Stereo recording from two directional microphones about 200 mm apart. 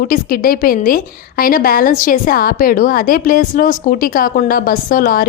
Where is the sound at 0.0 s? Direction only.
45° left (ahead or behind).